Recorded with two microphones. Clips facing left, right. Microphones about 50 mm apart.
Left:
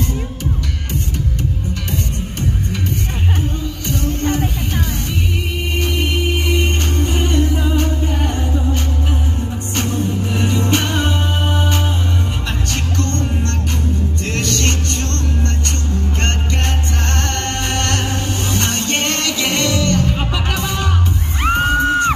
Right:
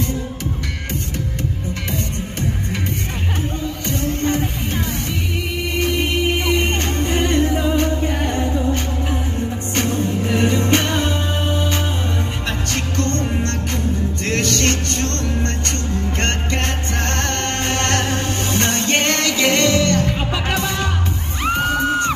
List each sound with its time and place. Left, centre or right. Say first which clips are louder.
3.9 s music: left 1 dB; right
6.0 s music: right 1 dB; right
9.8 s music: even; right
11.0 s music: left 1 dB; left
12.4 s music: even; right
21.4 s music: left 3 dB; left